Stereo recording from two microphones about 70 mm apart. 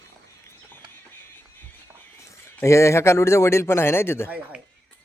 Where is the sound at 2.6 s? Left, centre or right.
Left.